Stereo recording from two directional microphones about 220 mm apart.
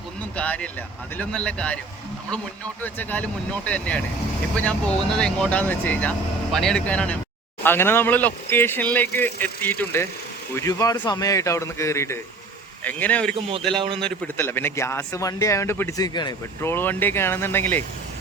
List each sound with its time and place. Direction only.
0.3 s speech: 5° left (ahead or behind)
2.8 s speech: 5° left (ahead or behind)
5.1 s speech: 5° left (ahead or behind)
13.7 s a man's voice: 25° right (ahead or behind)
14.0 s speech: 10° left (ahead or behind)